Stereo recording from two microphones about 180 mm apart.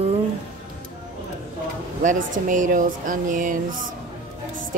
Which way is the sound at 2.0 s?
45° right (ahead or behind).